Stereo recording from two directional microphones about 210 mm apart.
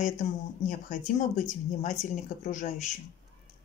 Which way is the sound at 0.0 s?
35° left (ahead or behind).